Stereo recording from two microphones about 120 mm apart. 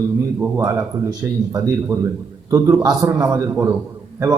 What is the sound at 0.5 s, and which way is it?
Speech, 25° right (ahead or behind).